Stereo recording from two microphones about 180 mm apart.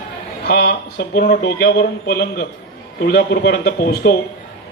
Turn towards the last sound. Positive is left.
turn(degrees=55)  # may be behind; listen again after turning